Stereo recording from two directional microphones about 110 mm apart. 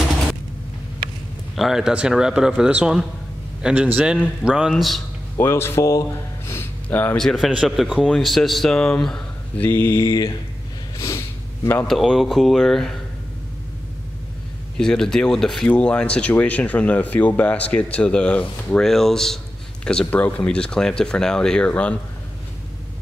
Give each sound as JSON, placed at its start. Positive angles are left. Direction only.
{"t": 1.5, "sound": "a man's voice", "side_deg": 0}
{"t": 5.4, "sound": "speech", "side_deg": 20}
{"t": 7.2, "sound": "speech", "side_deg": 0}
{"t": 9.7, "sound": "speech", "side_deg": 20}
{"t": 10.0, "sound": "speech", "side_deg": 35}
{"t": 11.0, "sound": "sniff", "side_deg": 30}
{"t": 11.9, "sound": "speech", "side_deg": 0}
{"t": 14.8, "sound": "speech", "side_deg": 5}